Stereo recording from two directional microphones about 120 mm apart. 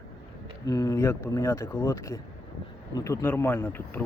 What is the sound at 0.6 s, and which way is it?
Speech, 25° left (ahead or behind).